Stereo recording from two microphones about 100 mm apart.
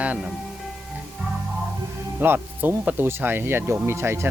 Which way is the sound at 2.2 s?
20° right (ahead or behind).